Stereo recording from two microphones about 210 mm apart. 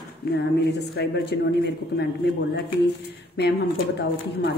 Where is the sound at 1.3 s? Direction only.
55° left (ahead or behind).